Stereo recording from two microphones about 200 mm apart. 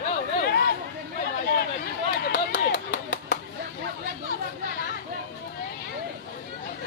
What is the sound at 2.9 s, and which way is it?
Clapping, 65° left (ahead or behind).